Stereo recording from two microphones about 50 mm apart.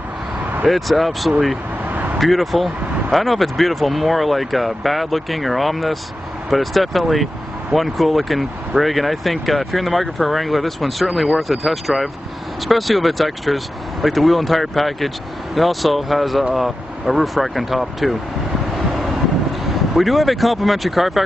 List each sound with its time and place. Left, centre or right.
0.4 s vehicle: right
0.7 s speech: centre
1.9 s vehicle: right
2.1 s speech: centre
19.7 s speech: centre